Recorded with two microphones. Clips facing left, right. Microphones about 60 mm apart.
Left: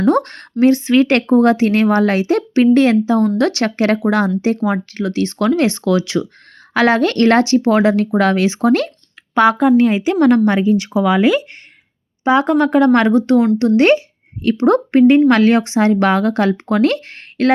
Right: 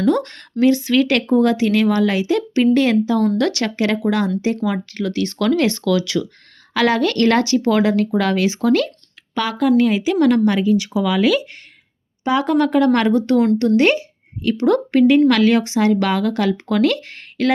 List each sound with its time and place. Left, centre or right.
0.0 s a woman's voice: left